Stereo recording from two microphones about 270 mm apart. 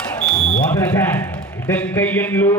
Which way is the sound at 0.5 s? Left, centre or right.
Centre.